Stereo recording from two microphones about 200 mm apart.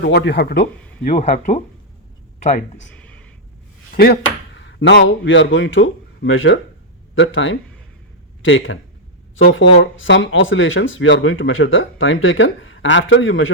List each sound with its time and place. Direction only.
0.0 s speech: 55° left (ahead or behind); by 1.6 s 35° left (ahead or behind)
2.8 s a sound: 5° left (ahead or behind)
3.9 s speech: 50° left (ahead or behind); by 13.5 s 75° left (ahead or behind)